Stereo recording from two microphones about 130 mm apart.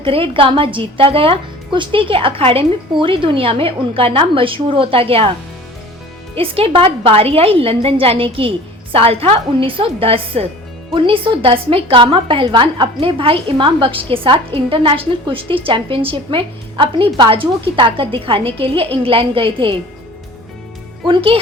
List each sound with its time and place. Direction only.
0.0 s a woman's voice: 45° right (ahead or behind)
6.3 s a woman's voice: 45° right (ahead or behind)
21.1 s a woman's voice: 45° right (ahead or behind)